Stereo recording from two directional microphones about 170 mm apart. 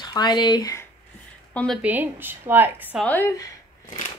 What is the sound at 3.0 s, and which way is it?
Speech, 10° left (ahead or behind).